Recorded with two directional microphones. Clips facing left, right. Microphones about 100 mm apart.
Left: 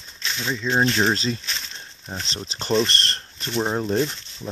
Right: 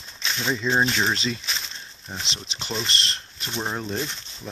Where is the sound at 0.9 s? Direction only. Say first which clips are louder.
Left 3 dB; 30° left (ahead or behind).